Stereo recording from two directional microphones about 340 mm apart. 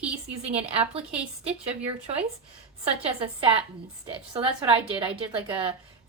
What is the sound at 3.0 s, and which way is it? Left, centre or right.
A woman's voice, centre.